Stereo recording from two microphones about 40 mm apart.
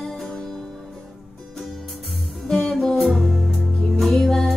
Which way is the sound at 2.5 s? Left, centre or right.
Centre.